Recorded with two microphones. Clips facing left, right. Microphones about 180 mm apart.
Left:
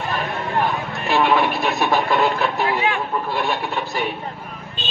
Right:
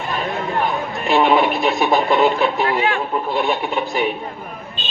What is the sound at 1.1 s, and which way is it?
Radio, 20° right (ahead or behind).